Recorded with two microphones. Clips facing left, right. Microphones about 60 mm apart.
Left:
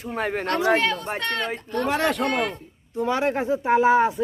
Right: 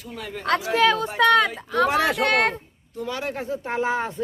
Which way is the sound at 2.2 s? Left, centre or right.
Right.